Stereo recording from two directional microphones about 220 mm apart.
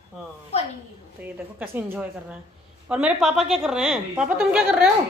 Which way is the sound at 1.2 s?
10° right (ahead or behind).